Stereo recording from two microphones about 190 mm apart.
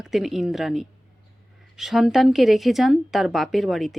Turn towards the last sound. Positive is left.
turn(degrees=0)  # may be behind; listen again after turning